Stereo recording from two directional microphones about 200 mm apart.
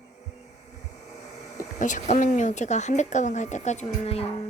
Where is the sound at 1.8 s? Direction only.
40° left (ahead or behind).